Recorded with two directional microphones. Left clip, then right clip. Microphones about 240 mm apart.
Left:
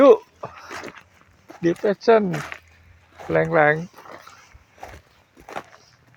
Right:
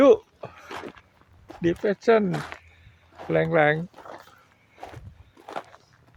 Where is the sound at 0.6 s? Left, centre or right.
Left.